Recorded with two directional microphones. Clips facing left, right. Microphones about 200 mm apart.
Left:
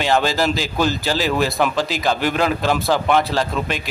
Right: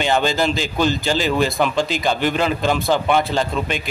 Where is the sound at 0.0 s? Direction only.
Centre (ahead or behind).